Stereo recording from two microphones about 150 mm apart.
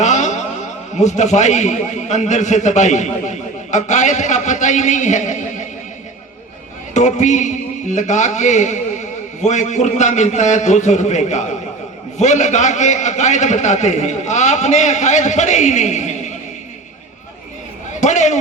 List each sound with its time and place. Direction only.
0.0 s a man's voice: 55° left (ahead or behind)
6.9 s speech: 55° left (ahead or behind)
18.0 s speech: 50° left (ahead or behind)